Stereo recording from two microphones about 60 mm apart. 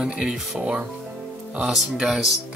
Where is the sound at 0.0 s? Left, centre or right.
Centre.